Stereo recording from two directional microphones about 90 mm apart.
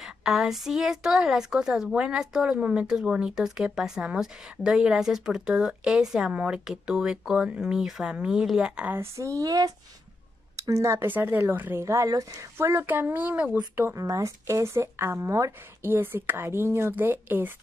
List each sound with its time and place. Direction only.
0.0 s a woman's voice: 5° right (ahead or behind)
8.9 s speech: 30° right (ahead or behind)
11.1 s speech: 20° right (ahead or behind)
11.8 s speech: 35° right (ahead or behind)
12.5 s speech: 30° right (ahead or behind); by 13.7 s 10° right (ahead or behind)
13.7 s speech: 30° right (ahead or behind)